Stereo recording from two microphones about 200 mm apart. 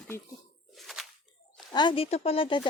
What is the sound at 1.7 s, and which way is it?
Speech, 25° left (ahead or behind).